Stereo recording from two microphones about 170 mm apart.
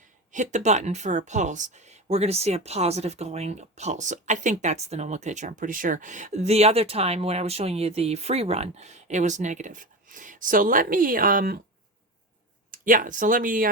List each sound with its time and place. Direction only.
0.3 s speech: 45° right (ahead or behind)
12.7 s speech: 55° right (ahead or behind)